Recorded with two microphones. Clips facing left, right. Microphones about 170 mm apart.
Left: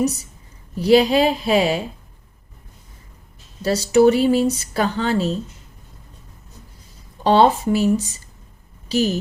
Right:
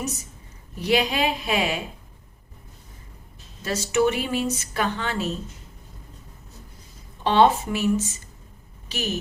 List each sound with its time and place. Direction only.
0.8 s speech: 35° left (ahead or behind)
3.6 s speech: 35° left (ahead or behind)
7.3 s speech: 35° left (ahead or behind)